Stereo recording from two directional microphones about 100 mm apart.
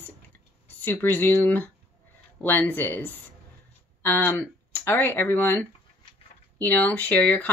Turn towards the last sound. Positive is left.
turn(degrees=15)  # may be behind; listen again after turning